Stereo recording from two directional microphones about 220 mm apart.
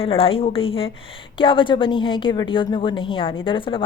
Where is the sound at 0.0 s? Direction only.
25° left (ahead or behind).